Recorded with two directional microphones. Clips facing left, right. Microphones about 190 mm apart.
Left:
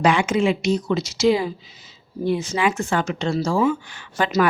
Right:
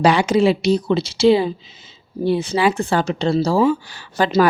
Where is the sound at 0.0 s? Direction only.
35° right (ahead or behind).